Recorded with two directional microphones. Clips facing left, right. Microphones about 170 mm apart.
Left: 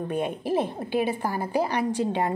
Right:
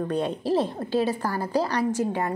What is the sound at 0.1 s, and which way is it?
A woman's voice, 10° left (ahead or behind).